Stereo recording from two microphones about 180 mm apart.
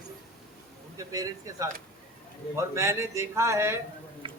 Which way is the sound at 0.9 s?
20° right (ahead or behind).